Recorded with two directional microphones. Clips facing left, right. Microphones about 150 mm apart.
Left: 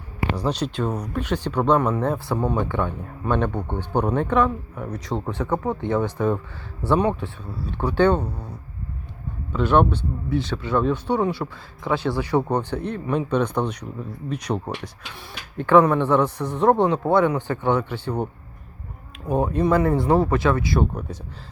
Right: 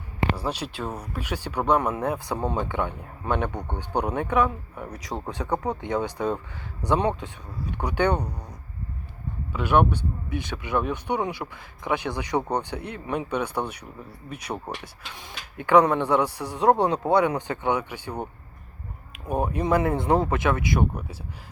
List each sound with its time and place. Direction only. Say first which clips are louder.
0.3 s speech: left 6 dB; 5° right (ahead or behind)
15.5 s speech: left 3 dB; 15° right (ahead or behind)
19.3 s speech: left 3 dB; 15° right (ahead or behind)